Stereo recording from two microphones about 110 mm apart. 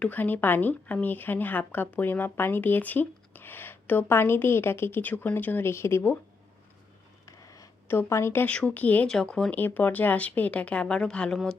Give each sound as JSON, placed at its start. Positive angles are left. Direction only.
{"t": 0.0, "sound": "speech", "side_deg": 15}
{"t": 7.3, "sound": "a sound", "side_deg": 30}
{"t": 7.9, "sound": "speech", "side_deg": 20}